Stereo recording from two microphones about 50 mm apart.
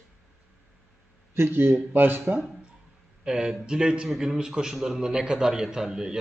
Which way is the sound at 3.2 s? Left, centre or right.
Centre.